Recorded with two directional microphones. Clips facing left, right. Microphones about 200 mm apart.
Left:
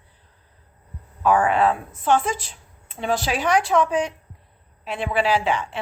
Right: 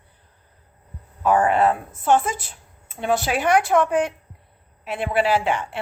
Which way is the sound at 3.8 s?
5° right (ahead or behind).